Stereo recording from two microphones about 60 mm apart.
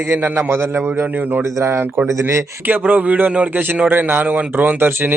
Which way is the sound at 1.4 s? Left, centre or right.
Right.